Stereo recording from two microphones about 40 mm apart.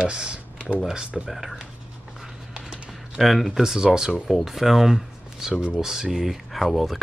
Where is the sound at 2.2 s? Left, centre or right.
Right.